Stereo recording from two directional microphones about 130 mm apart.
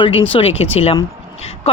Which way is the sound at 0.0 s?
45° left (ahead or behind).